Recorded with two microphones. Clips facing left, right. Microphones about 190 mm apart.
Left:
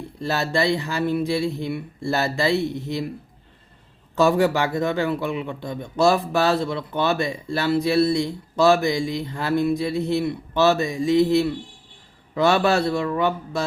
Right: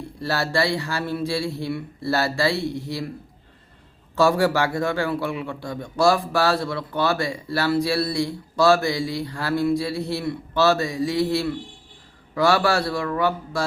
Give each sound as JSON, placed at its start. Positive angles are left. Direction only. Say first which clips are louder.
{"t": 0.2, "sound": "a man's voice", "louder": "left 1 dB", "side_deg": 20}
{"t": 4.2, "sound": "a man's voice", "louder": "left 1 dB", "side_deg": 20}